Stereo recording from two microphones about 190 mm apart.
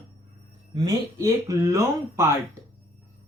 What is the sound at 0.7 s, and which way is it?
Speech, 20° right (ahead or behind).